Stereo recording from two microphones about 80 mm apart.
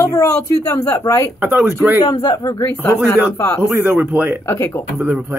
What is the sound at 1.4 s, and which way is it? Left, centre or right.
Speech, right.